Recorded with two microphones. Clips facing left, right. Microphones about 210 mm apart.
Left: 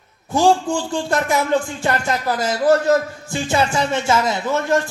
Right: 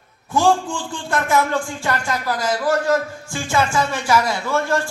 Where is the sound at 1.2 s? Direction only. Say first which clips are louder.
Left 1 dB; 20° left (ahead or behind).